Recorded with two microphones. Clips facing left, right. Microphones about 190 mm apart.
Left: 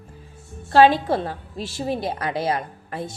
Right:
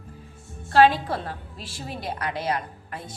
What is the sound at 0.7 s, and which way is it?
A woman's voice, 30° left (ahead or behind).